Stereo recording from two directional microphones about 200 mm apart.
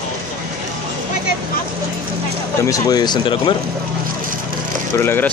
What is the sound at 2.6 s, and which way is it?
Speech, 15° left (ahead or behind).